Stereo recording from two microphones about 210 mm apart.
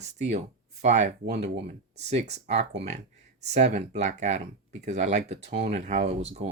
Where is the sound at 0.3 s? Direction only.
35° right (ahead or behind).